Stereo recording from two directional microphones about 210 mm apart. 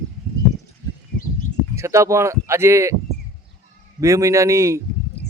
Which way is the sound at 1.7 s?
15° right (ahead or behind).